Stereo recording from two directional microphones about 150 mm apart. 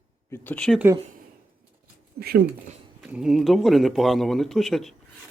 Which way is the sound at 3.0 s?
5° right (ahead or behind).